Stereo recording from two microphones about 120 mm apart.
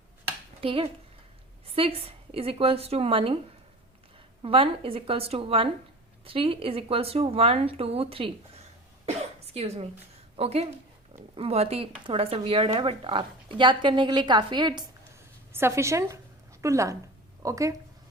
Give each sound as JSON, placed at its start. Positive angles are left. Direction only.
{"t": 0.6, "sound": "a woman's voice", "side_deg": -50}
{"t": 4.4, "sound": "a woman's voice", "side_deg": -50}
{"t": 9.0, "sound": "a sound", "side_deg": -60}
{"t": 10.3, "sound": "a woman's voice", "side_deg": -55}
{"t": 15.5, "sound": "a woman's voice", "side_deg": -20}